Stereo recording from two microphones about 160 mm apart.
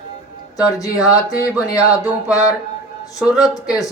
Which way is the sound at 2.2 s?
5° right (ahead or behind).